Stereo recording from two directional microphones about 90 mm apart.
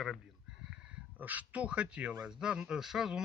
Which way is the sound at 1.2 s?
15° right (ahead or behind).